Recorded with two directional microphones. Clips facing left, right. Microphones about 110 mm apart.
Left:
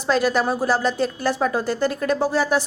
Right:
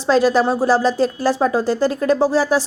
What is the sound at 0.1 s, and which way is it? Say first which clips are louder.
Speech: right 5 dB; 30° right (ahead or behind).